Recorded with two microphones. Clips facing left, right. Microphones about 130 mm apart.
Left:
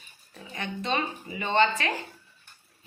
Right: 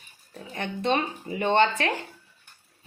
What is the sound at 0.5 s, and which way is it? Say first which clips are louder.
Speech: right 4 dB; 55° right (ahead or behind).